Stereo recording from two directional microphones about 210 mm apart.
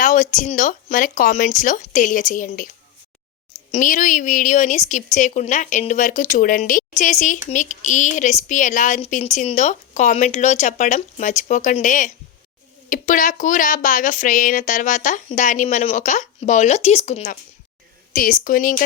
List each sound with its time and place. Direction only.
0.0 s a woman's voice: 35° left (ahead or behind)
3.7 s a woman's voice: 35° left (ahead or behind)